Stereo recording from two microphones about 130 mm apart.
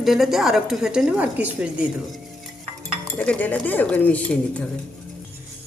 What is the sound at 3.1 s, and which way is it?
Speech, 10° left (ahead or behind).